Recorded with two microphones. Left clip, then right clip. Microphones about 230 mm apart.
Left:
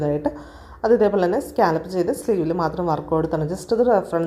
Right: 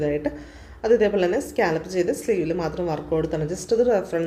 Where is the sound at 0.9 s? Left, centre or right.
Centre.